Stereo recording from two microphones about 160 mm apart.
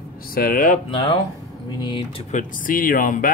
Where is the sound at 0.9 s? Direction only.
30° left (ahead or behind).